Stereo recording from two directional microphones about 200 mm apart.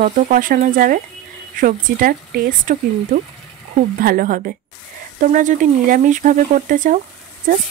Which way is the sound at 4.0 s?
45° right (ahead or behind).